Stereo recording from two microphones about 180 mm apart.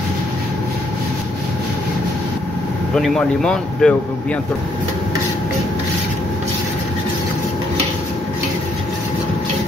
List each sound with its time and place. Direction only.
2.9 s speech: 5° left (ahead or behind)